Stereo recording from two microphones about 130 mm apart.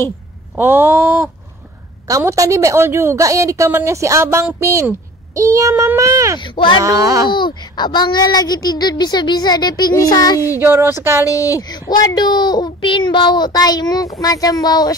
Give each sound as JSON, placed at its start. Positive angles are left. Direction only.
{"t": 0.6, "sound": "a sound", "side_deg": -15}
{"t": 2.0, "sound": "a woman's voice", "side_deg": -25}
{"t": 6.4, "sound": "speech", "side_deg": 40}
{"t": 6.8, "sound": "a woman's voice", "side_deg": -25}
{"t": 7.3, "sound": "speech", "side_deg": 35}
{"t": 10.6, "sound": "a woman's voice", "side_deg": -15}
{"t": 11.2, "sound": "speech", "side_deg": 25}